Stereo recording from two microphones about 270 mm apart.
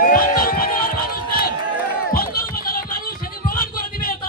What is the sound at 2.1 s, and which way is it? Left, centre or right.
Music, left.